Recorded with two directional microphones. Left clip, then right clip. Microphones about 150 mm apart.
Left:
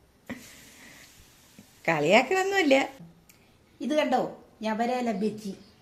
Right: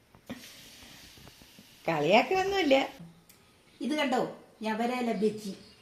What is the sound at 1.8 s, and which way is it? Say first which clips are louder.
A woman's voice: left 3 dB; 10° left (ahead or behind).